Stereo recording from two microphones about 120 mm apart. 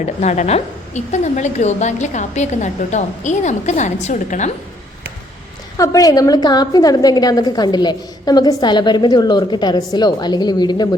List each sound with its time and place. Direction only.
0.0 s a woman's voice: 70° left (ahead or behind); by 4.5 s 85° left
5.7 s a woman's voice: 30° left (ahead or behind)